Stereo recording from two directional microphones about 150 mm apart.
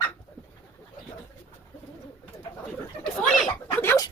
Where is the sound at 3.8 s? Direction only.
15° left (ahead or behind).